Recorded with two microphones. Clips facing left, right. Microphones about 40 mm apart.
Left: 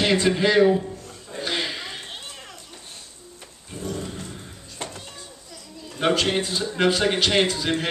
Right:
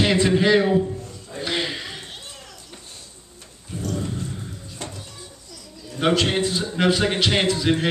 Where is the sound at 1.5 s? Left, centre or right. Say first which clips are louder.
Right 2 dB; centre.